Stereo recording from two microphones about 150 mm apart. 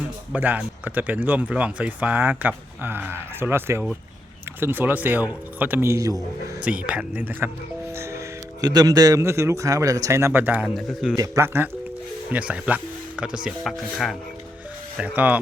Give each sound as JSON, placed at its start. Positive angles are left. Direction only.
{"t": 0.3, "sound": "a man's voice", "side_deg": -10}
{"t": 6.8, "sound": "speech", "side_deg": -10}
{"t": 7.9, "sound": "music", "side_deg": -20}
{"t": 8.6, "sound": "a man's voice", "side_deg": -25}
{"t": 10.8, "sound": "speech", "side_deg": 0}
{"t": 11.2, "sound": "speech", "side_deg": -15}